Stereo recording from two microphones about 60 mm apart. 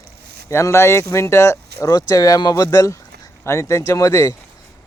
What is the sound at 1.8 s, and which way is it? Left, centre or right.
Speech, left.